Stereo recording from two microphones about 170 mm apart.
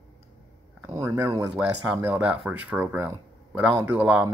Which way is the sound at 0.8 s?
15° right (ahead or behind).